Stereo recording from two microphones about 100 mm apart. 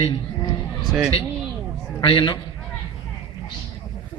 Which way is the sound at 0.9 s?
10° right (ahead or behind).